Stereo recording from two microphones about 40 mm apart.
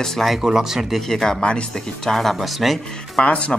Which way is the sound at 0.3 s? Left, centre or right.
Centre.